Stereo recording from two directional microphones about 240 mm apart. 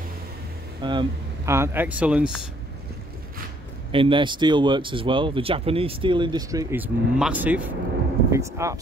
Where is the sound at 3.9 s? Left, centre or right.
Right.